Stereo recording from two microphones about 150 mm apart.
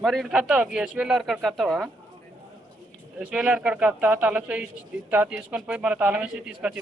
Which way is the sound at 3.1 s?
5° right (ahead or behind).